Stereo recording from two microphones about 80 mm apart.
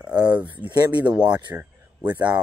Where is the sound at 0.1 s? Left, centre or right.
Right.